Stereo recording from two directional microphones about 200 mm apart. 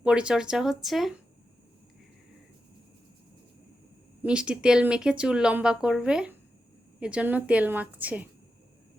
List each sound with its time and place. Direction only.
0.0 s speech: 5° right (ahead or behind)
4.2 s a woman's voice: 5° right (ahead or behind)